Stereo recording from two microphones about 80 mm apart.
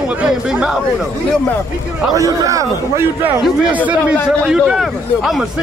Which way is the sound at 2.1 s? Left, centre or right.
Right.